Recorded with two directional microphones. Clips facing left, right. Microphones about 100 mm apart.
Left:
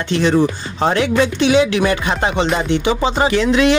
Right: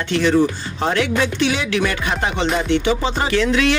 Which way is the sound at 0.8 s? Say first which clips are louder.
Left 4 dB; 25° left (ahead or behind).